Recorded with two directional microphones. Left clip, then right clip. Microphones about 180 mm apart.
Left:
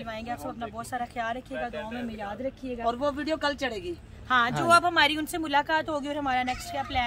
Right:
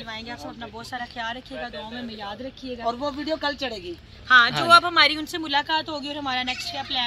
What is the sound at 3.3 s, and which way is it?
Speech, 35° right (ahead or behind).